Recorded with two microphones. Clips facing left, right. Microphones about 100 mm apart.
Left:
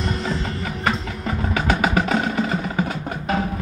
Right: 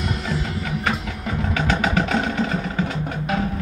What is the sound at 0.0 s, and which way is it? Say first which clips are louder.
Music: left 1 dB; 5° right (ahead or behind).